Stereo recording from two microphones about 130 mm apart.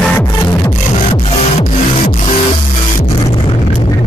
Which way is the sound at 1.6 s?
55° left (ahead or behind).